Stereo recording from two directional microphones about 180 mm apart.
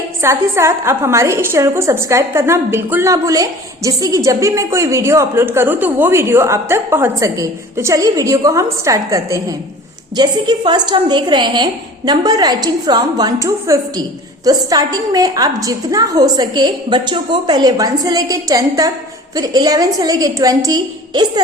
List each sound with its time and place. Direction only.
0.2 s a woman's voice: 15° right (ahead or behind)